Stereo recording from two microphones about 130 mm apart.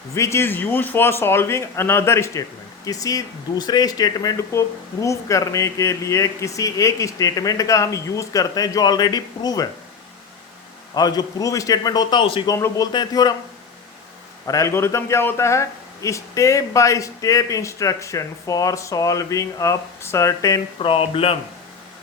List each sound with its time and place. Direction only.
0.1 s speech: 20° left (ahead or behind)
10.9 s speech: 30° left (ahead or behind)
14.4 s speech: 25° left (ahead or behind)
20.7 s speech: 45° left (ahead or behind)